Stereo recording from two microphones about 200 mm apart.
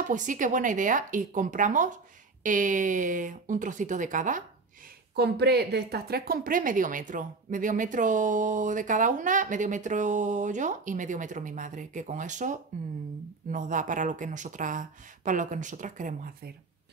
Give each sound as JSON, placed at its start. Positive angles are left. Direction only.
{"t": 0.0, "sound": "a woman's voice", "side_deg": -40}
{"t": 5.1, "sound": "a woman's voice", "side_deg": -55}